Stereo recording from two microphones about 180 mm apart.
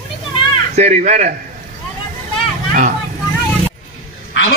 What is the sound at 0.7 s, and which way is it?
Speech, 40° right (ahead or behind).